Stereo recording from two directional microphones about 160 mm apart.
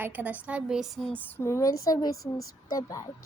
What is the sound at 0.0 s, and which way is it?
A woman's voice, 10° right (ahead or behind).